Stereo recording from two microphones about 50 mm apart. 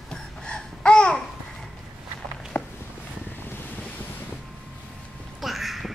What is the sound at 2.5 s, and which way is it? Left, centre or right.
Walk, left.